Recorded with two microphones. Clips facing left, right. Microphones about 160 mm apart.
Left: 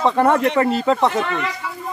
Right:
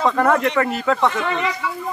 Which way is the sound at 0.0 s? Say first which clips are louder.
Left 1 dB; 25° left (ahead or behind).